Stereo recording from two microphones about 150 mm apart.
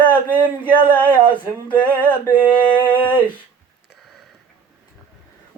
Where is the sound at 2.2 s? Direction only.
30° left (ahead or behind).